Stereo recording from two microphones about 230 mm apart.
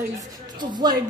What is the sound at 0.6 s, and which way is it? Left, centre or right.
Speech, centre.